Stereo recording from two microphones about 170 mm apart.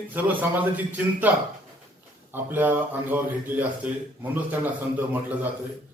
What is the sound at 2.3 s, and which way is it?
Speech, 10° right (ahead or behind).